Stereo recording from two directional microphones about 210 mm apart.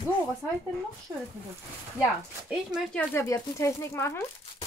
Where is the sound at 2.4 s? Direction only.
Centre (ahead or behind).